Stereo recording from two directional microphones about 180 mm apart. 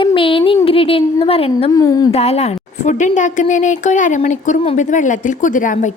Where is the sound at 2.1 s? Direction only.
35° left (ahead or behind).